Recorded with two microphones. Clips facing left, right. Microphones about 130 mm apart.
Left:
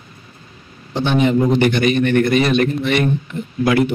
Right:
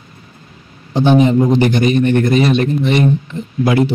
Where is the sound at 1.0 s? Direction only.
35° right (ahead or behind).